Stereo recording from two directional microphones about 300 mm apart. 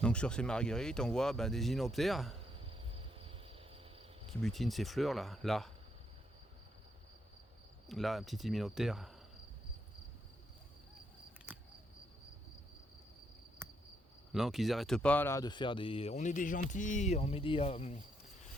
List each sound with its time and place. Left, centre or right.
0.0 s speech: centre
2.5 s cricket: centre
4.4 s speech: centre
7.9 s speech: centre
11.5 s cricket: centre
13.6 s cricket: centre
14.3 s speech: centre; by 18.0 s left